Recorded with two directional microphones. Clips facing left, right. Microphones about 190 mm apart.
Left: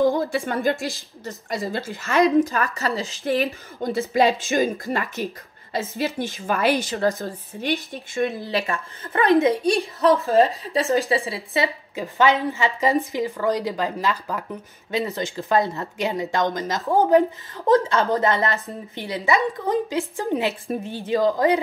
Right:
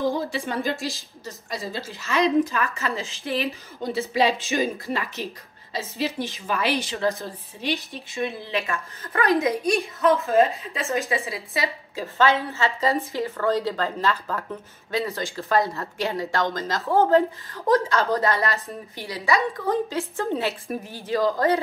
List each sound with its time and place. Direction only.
0.3 s a woman's voice: 50° left (ahead or behind)
2.5 s a woman's voice: 35° left (ahead or behind)
11.9 s a woman's voice: 15° left (ahead or behind)
20.6 s a woman's voice: 25° left (ahead or behind)